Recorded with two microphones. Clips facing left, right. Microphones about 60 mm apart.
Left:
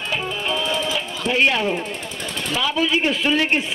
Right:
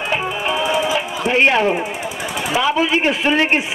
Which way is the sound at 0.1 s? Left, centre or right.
Right.